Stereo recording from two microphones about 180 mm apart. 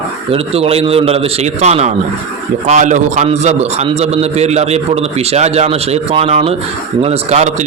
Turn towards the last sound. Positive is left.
turn(degrees=-35)  # may be behind; listen again after turning